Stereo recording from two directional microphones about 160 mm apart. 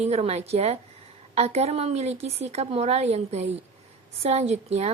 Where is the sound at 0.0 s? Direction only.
40° right (ahead or behind).